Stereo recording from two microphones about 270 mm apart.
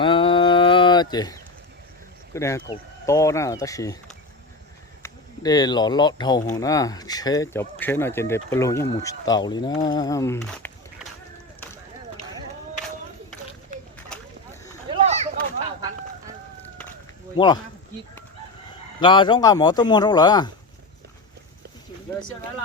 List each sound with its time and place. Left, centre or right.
0.0 s a sound: centre
2.3 s speech: centre
5.0 s speech: centre
14.8 s a sound: right
17.3 s speech: centre
18.9 s speech: centre